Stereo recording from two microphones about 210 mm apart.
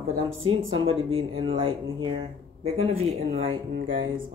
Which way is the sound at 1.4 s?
25° right (ahead or behind).